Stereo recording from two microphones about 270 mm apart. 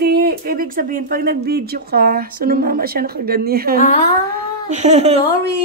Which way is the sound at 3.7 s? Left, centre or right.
Left.